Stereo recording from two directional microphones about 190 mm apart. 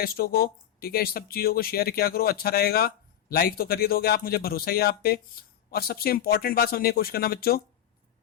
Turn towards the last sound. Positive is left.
turn(degrees=50)  # may be behind; listen again after turning